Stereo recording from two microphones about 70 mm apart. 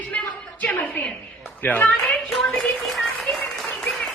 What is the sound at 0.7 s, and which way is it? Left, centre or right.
A woman's voice, left.